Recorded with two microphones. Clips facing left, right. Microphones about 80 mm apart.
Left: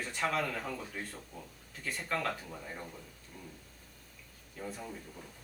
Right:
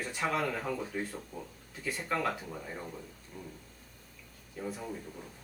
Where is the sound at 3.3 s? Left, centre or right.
Centre.